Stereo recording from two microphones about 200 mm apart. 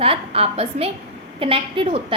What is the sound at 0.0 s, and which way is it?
A woman's voice, 30° right (ahead or behind).